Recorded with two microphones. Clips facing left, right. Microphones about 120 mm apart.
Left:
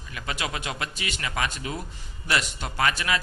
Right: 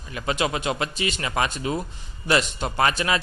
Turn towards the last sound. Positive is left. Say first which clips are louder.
# right 3 dB
turn(degrees=-30)  # may be behind; listen again after turning